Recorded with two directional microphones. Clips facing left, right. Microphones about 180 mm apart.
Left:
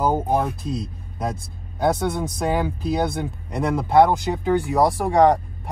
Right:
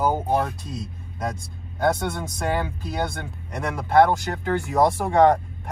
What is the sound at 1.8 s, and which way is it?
Speech, 15° left (ahead or behind).